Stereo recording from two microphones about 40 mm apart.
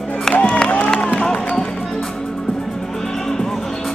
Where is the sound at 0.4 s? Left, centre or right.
Left.